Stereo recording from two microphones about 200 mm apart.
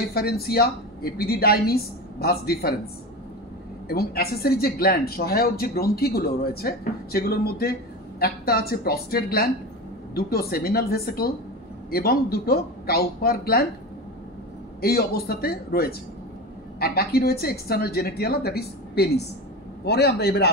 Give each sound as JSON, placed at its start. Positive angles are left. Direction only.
{"t": 0.1, "sound": "speech", "side_deg": 50}
{"t": 3.9, "sound": "speech", "side_deg": 50}
{"t": 14.8, "sound": "a man's voice", "side_deg": 50}